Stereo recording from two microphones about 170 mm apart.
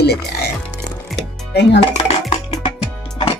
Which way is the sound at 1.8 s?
35° left (ahead or behind).